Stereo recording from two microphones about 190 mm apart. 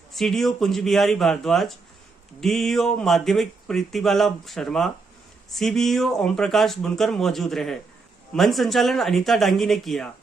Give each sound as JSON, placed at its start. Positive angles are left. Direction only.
{"t": 0.1, "sound": "speech", "side_deg": 0}